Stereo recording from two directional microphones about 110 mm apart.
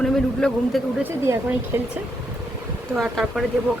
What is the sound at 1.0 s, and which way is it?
Speech, 25° right (ahead or behind).